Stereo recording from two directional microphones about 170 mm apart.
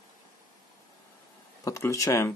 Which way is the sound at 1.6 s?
15° left (ahead or behind).